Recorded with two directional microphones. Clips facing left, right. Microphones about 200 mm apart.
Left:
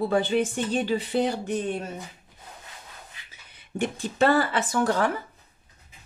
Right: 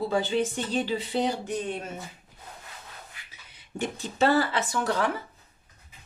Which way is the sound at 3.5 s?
55° left (ahead or behind).